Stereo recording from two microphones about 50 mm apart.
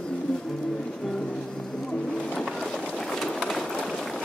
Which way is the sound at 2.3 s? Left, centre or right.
Centre.